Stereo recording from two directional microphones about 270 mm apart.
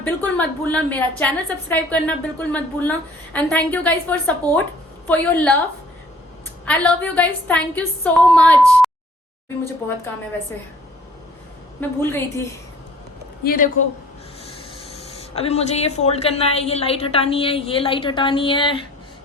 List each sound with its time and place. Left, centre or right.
0.0 s a woman's voice: centre
6.7 s a woman's voice: centre
11.8 s a woman's voice: centre
13.4 s a man's voice: left
15.4 s a woman's voice: left